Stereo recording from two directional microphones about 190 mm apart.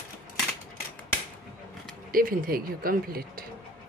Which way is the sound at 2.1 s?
50° right (ahead or behind).